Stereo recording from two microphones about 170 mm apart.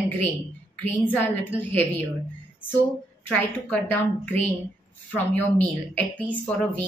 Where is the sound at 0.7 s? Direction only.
10° left (ahead or behind).